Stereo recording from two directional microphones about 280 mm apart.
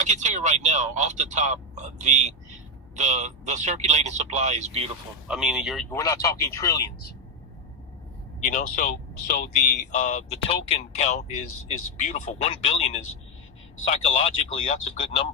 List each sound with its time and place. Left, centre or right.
0.0 s speech: right
5.3 s speech: centre
5.9 s speech: centre
8.4 s speech: left